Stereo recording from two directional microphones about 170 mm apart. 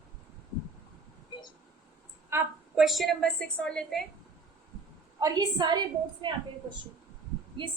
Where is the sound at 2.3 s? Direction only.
15° right (ahead or behind).